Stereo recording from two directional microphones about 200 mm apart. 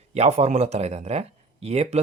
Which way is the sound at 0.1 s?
35° right (ahead or behind).